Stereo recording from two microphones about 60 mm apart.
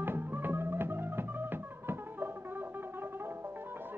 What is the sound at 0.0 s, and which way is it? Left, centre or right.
Music, right.